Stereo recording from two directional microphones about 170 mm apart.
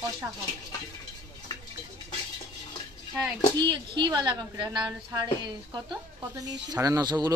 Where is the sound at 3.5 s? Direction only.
25° right (ahead or behind).